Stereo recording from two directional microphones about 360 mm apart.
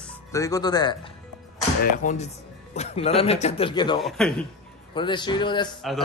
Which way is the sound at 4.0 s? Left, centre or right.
Centre.